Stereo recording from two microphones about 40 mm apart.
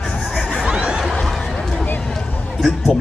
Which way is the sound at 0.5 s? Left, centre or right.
Centre.